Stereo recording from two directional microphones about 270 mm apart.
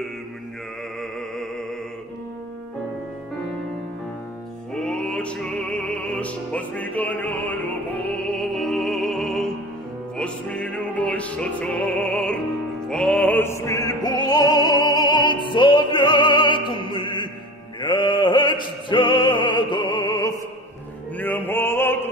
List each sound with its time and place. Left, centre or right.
4.7 s music: centre
17.7 s opera: centre
21.2 s music: centre